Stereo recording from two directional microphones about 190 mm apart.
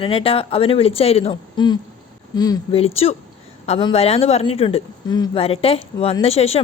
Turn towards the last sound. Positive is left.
turn(degrees=30)  # may be behind; listen again after turning